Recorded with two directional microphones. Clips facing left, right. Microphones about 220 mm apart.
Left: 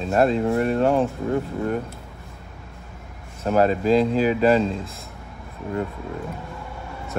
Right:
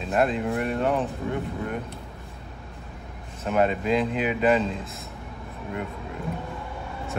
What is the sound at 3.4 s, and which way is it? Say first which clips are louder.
Speech: left 4 dB; 35° left (ahead or behind).